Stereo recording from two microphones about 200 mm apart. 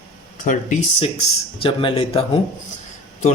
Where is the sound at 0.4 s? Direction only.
40° left (ahead or behind).